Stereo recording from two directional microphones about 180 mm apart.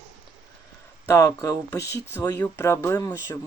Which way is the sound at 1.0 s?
15° left (ahead or behind).